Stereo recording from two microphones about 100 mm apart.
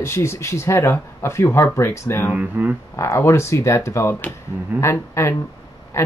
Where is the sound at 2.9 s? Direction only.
30° left (ahead or behind).